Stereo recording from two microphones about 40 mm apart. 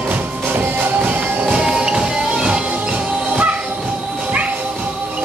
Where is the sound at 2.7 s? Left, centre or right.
Right.